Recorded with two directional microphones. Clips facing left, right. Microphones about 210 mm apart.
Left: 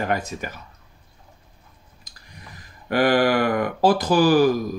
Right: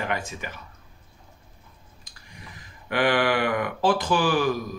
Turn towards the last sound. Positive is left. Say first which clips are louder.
# left 6 dB
turn(degrees=40)  # may be behind; listen again after turning